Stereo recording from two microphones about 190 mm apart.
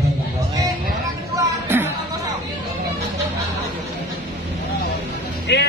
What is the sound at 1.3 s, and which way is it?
Music, 10° right (ahead or behind).